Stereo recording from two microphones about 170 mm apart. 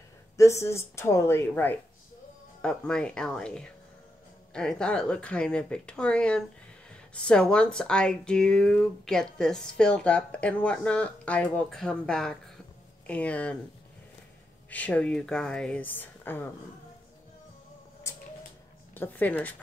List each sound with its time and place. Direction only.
0.4 s speech: 15° left (ahead or behind)
14.7 s speech: 10° left (ahead or behind)
18.1 s a sound: 20° left (ahead or behind)
18.9 s speech: 10° left (ahead or behind)